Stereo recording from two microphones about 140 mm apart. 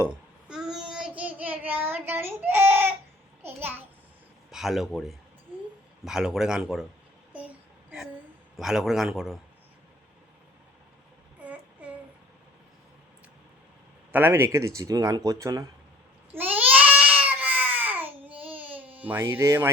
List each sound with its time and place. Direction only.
0.0 s child singing: 5° right (ahead or behind)
3.4 s a child's voice: 15° right (ahead or behind)
4.5 s a man's voice: centre (ahead or behind)
7.3 s child singing: 10° right (ahead or behind)
8.5 s a man's voice: centre (ahead or behind)
14.1 s speech: 15° right (ahead or behind)
16.3 s babbling: 15° right (ahead or behind)